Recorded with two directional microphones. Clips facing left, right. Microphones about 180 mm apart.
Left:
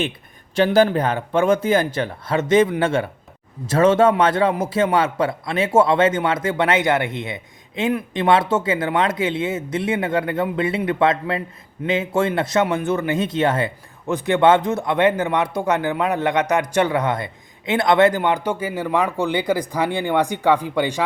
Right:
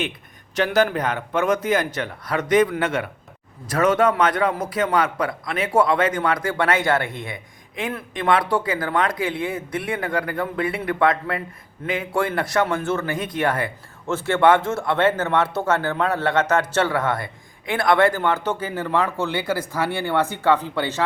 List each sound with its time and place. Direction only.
0.5 s a man's voice: 30° left (ahead or behind); by 21.0 s 15° left (ahead or behind)